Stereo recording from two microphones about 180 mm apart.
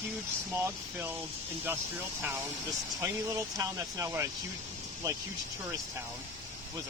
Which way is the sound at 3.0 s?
15° right (ahead or behind).